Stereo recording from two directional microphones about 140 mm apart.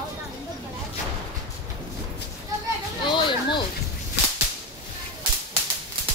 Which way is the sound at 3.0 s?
35° left (ahead or behind).